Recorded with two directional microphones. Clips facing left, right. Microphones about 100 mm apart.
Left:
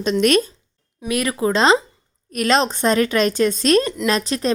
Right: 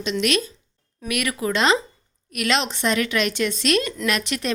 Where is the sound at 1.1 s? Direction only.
30° left (ahead or behind).